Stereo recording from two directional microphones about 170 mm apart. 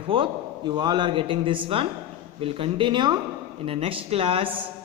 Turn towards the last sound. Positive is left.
turn(degrees=-35)  # may be behind; listen again after turning